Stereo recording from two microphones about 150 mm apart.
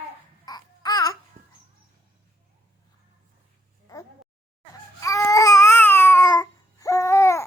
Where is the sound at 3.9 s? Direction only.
25° left (ahead or behind).